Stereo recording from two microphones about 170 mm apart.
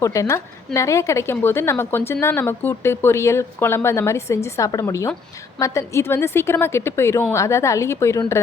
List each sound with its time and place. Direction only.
0.0 s a woman's voice: 20° left (ahead or behind)